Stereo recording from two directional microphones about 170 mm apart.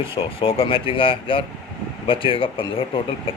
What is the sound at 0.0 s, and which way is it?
Speech, 30° left (ahead or behind).